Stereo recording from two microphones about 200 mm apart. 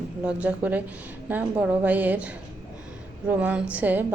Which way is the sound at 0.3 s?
5° right (ahead or behind).